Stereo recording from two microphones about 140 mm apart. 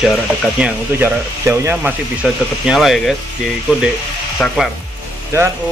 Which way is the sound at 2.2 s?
Centre (ahead or behind).